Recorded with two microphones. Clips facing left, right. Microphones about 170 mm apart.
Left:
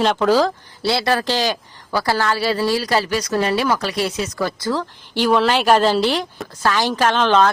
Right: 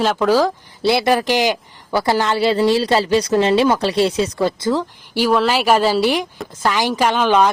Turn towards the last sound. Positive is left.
turn(degrees=-10)  # may be behind; listen again after turning